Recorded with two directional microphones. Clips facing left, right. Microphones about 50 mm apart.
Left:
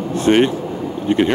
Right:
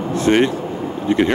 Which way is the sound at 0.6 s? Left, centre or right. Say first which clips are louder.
Even; right.